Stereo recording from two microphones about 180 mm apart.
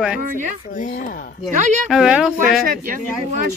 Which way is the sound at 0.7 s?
45° left (ahead or behind).